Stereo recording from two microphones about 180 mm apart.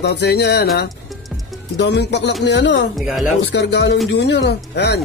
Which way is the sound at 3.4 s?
70° left (ahead or behind).